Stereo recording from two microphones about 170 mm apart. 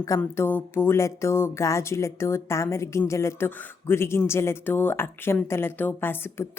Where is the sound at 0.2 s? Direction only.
10° left (ahead or behind).